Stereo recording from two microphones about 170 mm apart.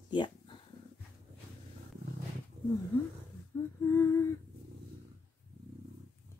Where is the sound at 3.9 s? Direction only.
15° left (ahead or behind).